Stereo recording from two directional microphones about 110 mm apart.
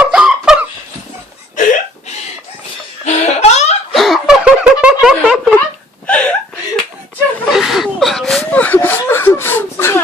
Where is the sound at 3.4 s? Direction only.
80° left.